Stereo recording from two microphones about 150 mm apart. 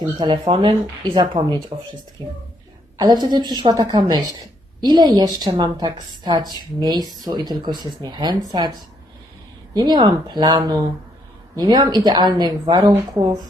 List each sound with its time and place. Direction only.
0.0 s speech: 30° right (ahead or behind)
9.7 s speech: 30° right (ahead or behind)